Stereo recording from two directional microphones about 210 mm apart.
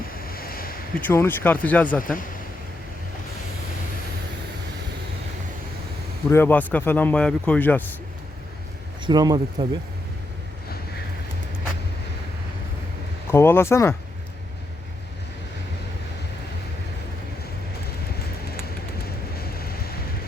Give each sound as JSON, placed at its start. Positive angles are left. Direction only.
{"t": 0.1, "sound": "a sound", "side_deg": 45}
{"t": 1.0, "sound": "a man's voice", "side_deg": 10}
{"t": 2.0, "sound": "speech", "side_deg": 40}
{"t": 6.3, "sound": "a man's voice", "side_deg": 10}
{"t": 9.0, "sound": "speech", "side_deg": -20}
{"t": 13.3, "sound": "a man's voice", "side_deg": 10}
{"t": 19.4, "sound": "a sound", "side_deg": 45}